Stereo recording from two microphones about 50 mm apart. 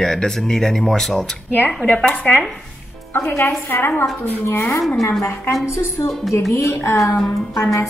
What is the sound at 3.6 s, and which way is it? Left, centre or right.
Speech, left.